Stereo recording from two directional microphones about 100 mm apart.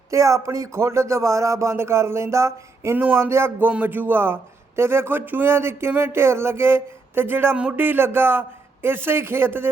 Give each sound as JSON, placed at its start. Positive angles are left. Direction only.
{"t": 0.1, "sound": "speech", "side_deg": -30}